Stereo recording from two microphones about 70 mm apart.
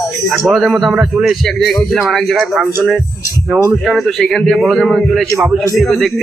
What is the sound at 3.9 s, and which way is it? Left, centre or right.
A man's voice, centre.